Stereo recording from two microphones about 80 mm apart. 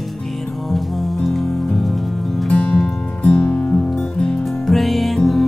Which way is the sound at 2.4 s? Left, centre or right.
Centre.